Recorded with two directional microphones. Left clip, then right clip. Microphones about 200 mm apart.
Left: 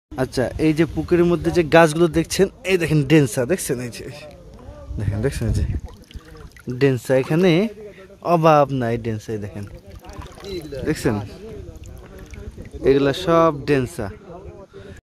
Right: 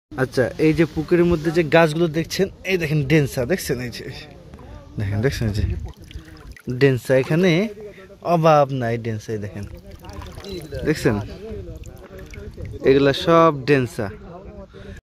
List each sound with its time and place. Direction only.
0.1 s speech: 10° left (ahead or behind)
6.7 s speech: 5° left (ahead or behind)
10.1 s pour: 5° right (ahead or behind)
10.9 s speech: 5° left (ahead or behind)
12.8 s speech: centre (ahead or behind)